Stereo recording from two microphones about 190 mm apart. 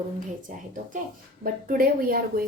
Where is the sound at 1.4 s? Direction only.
50° right (ahead or behind).